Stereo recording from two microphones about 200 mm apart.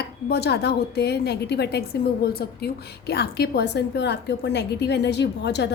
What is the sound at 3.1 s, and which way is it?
A woman's voice, 55° left (ahead or behind).